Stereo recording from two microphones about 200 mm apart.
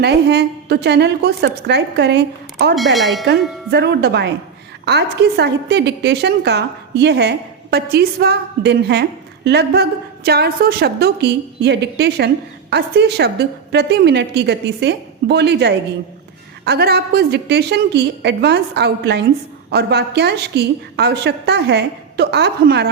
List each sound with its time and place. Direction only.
0.0 s a woman's voice: 55° right (ahead or behind)
2.7 s speech: centre (ahead or behind)
3.2 s a woman's voice: 55° right (ahead or behind)